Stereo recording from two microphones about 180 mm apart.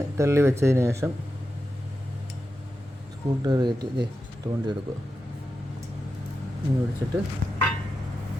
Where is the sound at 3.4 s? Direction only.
20° right (ahead or behind).